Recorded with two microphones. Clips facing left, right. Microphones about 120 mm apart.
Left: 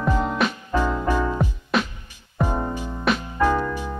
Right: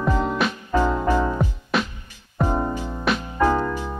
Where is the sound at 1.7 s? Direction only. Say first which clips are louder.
Left 1 dB; centre (ahead or behind).